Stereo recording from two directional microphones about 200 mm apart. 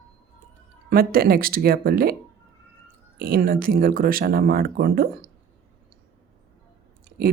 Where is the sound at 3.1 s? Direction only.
50° right (ahead or behind).